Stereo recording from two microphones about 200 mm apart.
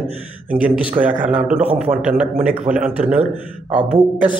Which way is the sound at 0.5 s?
5° right (ahead or behind).